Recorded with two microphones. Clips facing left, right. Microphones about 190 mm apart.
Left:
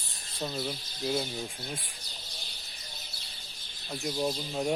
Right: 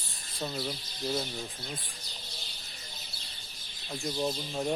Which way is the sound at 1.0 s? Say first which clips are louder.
Left 2 dB; 10° left (ahead or behind).